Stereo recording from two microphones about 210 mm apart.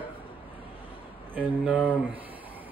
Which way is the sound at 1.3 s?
5° right (ahead or behind).